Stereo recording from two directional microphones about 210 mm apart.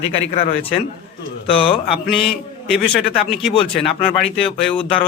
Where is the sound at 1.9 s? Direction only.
Centre (ahead or behind).